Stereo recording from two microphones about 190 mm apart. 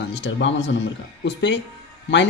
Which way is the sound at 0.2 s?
70° left (ahead or behind).